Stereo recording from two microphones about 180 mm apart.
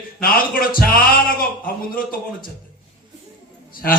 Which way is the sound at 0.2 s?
55° left (ahead or behind).